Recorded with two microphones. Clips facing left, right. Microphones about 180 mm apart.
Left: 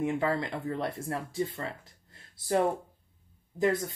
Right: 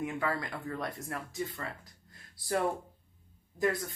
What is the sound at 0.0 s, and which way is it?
Speech, 25° left (ahead or behind).